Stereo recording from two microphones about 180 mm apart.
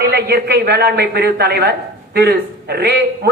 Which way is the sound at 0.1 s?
65° right (ahead or behind).